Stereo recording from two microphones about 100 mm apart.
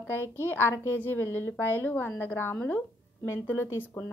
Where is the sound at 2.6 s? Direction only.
15° left (ahead or behind).